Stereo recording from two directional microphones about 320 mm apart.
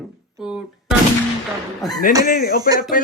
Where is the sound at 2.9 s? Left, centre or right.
Left.